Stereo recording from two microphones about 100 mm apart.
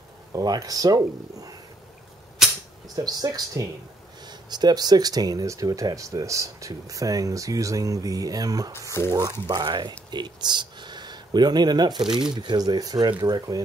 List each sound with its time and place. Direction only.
0.3 s speech: 40° right (ahead or behind)
3.0 s speech: 40° right (ahead or behind)
9.0 s speech: 25° left (ahead or behind)
9.5 s speech: 45° right (ahead or behind)
12.0 s speech: 5° right (ahead or behind)
12.3 s speech: 50° right (ahead or behind)